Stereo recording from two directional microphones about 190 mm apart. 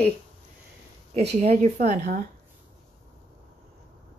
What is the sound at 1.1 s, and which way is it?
A woman's voice, 35° right (ahead or behind).